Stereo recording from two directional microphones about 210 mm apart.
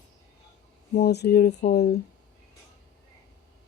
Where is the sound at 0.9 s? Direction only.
50° left (ahead or behind).